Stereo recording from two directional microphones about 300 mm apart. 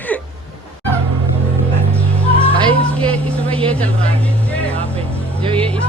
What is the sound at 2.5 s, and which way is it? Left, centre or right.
Music, centre.